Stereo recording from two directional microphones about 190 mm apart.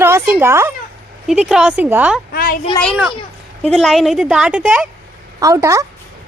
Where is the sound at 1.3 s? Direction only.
Centre (ahead or behind).